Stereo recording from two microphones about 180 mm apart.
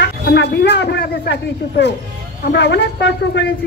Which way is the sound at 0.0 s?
70° left (ahead or behind).